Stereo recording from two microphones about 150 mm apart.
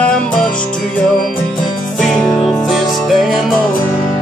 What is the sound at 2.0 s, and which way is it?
Music, 5° left (ahead or behind).